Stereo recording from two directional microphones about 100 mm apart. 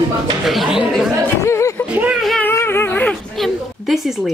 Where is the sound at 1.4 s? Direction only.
30° left (ahead or behind).